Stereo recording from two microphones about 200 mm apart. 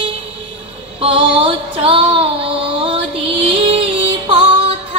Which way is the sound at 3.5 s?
30° right (ahead or behind).